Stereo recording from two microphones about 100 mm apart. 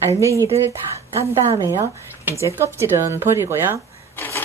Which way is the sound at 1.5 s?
35° right (ahead or behind).